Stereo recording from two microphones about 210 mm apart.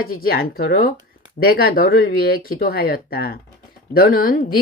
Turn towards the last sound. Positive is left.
turn(degrees=45)  # may be behind; listen again after turning